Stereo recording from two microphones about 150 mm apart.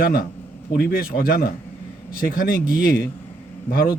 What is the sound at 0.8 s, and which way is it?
Speech, 90° left.